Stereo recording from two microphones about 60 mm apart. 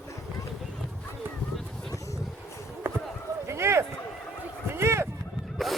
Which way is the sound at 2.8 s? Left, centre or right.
Right.